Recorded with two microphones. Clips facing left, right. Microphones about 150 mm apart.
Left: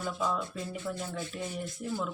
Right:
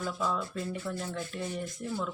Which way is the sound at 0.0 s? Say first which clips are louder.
Even; 15° left (ahead or behind).